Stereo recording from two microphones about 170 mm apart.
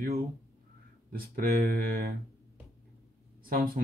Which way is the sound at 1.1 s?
60° right (ahead or behind).